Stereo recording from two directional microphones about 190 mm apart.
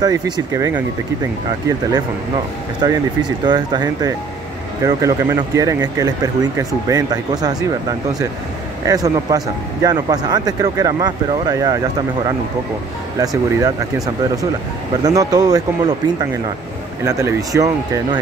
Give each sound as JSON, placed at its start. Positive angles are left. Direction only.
{"t": 0.0, "sound": "speech", "side_deg": -15}
{"t": 2.8, "sound": "speech", "side_deg": -20}
{"t": 8.8, "sound": "speech", "side_deg": -20}
{"t": 13.2, "sound": "speech", "side_deg": -20}
{"t": 17.0, "sound": "speech", "side_deg": -15}